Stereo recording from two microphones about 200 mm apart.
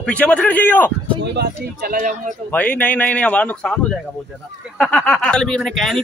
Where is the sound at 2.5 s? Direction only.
10° left (ahead or behind).